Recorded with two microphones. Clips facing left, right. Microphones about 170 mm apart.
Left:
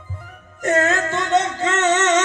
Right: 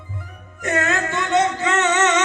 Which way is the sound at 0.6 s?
45° left (ahead or behind).